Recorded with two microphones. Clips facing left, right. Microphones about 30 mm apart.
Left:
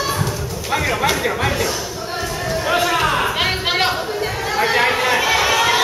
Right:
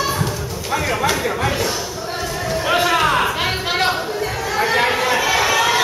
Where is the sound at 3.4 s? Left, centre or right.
Centre.